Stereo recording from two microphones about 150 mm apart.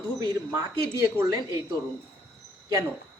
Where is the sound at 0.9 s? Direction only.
20° right (ahead or behind).